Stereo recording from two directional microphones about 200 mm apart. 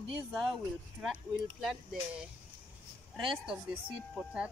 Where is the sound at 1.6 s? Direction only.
Centre (ahead or behind).